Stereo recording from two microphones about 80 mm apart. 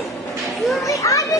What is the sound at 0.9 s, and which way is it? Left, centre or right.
Children playing, left.